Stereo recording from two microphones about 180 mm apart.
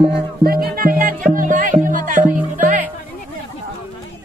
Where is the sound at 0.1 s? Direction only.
55° right (ahead or behind).